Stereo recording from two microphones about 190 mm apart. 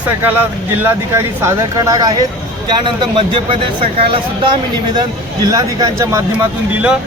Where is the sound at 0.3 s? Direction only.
10° right (ahead or behind); by 3.6 s 25° right (ahead or behind).